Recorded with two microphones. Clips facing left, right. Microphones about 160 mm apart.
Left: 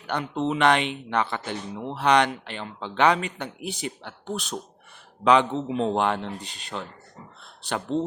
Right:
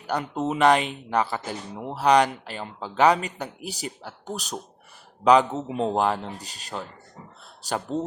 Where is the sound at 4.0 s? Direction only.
5° right (ahead or behind).